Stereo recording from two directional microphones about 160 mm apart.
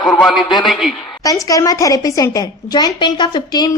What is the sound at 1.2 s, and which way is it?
A woman's voice, 20° left (ahead or behind).